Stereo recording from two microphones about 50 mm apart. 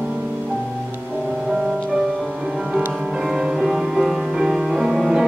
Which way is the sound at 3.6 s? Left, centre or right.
Centre.